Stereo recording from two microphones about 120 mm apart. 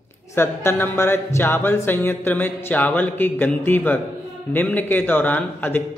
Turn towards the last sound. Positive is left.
turn(degrees=15)  # may be behind; listen again after turning